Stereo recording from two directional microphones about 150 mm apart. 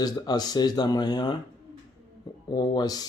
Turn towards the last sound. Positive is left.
turn(degrees=25)  # may be behind; listen again after turning